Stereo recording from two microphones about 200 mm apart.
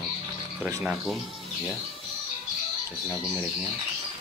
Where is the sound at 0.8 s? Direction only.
Centre (ahead or behind).